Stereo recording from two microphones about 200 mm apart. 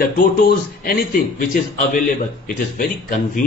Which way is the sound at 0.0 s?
45° left (ahead or behind).